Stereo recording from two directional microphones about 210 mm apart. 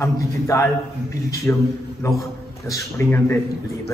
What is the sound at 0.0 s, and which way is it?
A man's voice, 15° left (ahead or behind).